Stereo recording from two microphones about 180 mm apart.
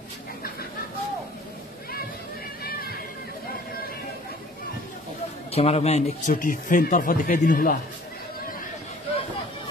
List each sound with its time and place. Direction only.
2.6 s music: 60° left (ahead or behind)
5.5 s speech: 35° left (ahead or behind)